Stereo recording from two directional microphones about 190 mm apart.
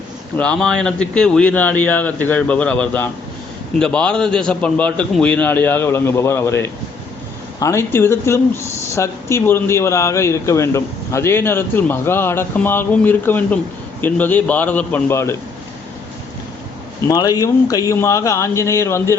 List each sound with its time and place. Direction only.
0.3 s speech: 5° left (ahead or behind)
17.1 s speech: 20° left (ahead or behind)